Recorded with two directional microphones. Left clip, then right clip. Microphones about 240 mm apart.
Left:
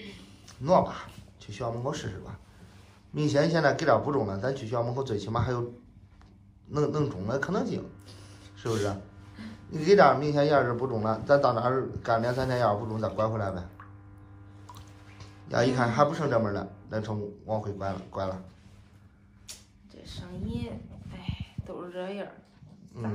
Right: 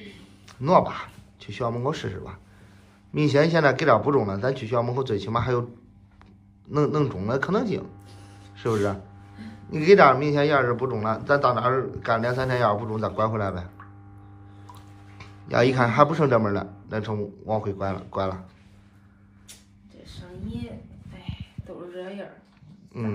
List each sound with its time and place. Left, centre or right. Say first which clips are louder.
0.5 s a man's voice: right 4 dB; centre
6.7 s a man's voice: right 5 dB; centre
15.1 s a man's voice: right 5 dB; centre
21.6 s a sound: even; left